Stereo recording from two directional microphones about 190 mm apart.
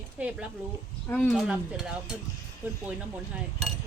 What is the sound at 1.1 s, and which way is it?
Stir, 5° left (ahead or behind).